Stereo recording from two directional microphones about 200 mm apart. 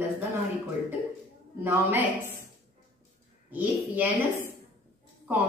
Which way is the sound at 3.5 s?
10° right (ahead or behind).